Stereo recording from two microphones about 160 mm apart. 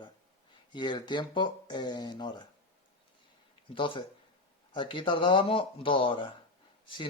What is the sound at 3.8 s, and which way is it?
Speech, 30° left (ahead or behind).